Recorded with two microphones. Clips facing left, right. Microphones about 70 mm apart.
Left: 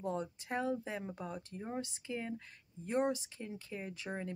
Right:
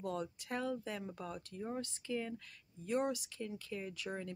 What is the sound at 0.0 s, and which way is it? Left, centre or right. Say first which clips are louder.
Speech: left 2 dB; left.